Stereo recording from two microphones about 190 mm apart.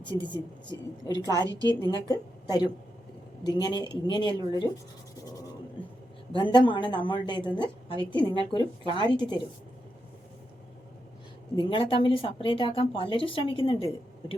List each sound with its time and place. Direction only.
0.0 s a woman's voice: 25° left (ahead or behind)
1.3 s a woman's voice: 20° right (ahead or behind)
1.7 s a woman's voice: 15° left (ahead or behind)
6.3 s a woman's voice: 25° left (ahead or behind)
11.5 s a woman's voice: 25° left (ahead or behind)